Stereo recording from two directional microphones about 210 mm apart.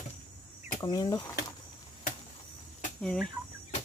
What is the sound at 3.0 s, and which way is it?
Speech, 5° left (ahead or behind).